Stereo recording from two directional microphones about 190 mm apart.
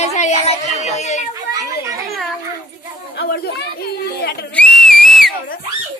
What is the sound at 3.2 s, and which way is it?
Speech, 55° left (ahead or behind).